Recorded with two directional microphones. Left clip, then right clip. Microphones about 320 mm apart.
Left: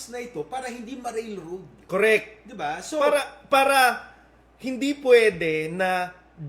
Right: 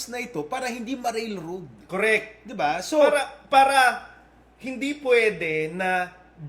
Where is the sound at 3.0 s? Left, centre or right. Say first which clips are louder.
Right 2 dB; centre.